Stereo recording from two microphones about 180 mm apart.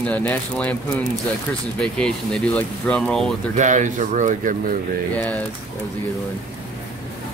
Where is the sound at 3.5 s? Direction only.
45° right (ahead or behind).